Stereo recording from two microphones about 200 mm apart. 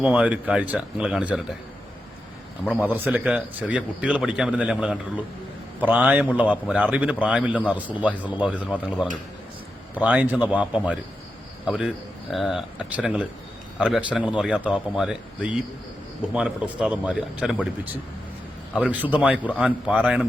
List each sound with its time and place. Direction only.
0.0 s speech: 5° right (ahead or behind)
2.8 s a man's voice: 10° right (ahead or behind)